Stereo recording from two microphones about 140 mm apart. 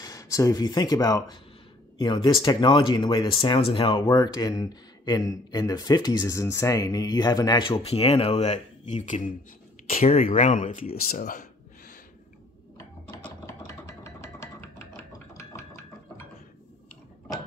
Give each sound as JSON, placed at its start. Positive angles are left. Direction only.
{"t": 0.0, "sound": "speech", "side_deg": 25}
{"t": 10.2, "sound": "speech", "side_deg": 70}
{"t": 12.7, "sound": "a sound", "side_deg": 15}